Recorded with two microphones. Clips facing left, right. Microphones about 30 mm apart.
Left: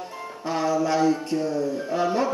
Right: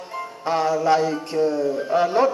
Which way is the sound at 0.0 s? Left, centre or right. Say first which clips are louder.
Right 4 dB; right.